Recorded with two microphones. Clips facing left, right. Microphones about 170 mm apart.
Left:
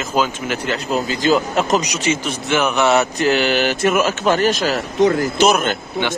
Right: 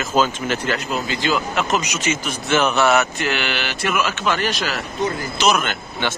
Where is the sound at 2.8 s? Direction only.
30° left (ahead or behind).